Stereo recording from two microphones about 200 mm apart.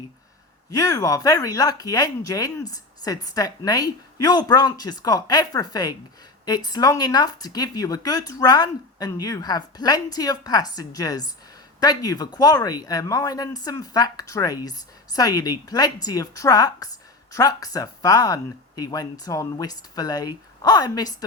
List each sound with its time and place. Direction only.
0.7 s speech: 20° left (ahead or behind)